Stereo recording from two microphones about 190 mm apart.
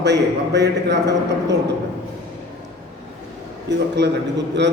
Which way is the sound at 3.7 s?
65° right (ahead or behind).